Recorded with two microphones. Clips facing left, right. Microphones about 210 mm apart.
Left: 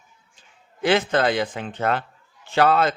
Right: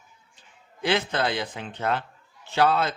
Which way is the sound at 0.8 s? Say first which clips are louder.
Left 5 dB; 50° left (ahead or behind).